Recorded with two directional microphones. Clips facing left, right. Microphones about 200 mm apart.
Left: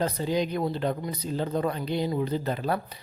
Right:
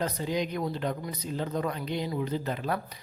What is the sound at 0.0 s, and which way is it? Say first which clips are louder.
Speech: left 3 dB; 30° left (ahead or behind).